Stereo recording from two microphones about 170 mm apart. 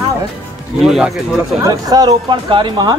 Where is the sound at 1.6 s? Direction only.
20° right (ahead or behind).